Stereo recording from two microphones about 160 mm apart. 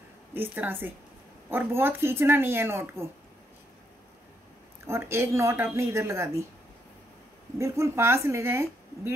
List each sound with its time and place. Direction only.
0.3 s speech: 15° right (ahead or behind)
4.8 s speech: 15° right (ahead or behind)
7.5 s speech: 20° right (ahead or behind)